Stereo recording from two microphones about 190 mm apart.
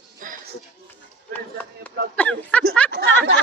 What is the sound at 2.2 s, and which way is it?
Speech, 5° left (ahead or behind).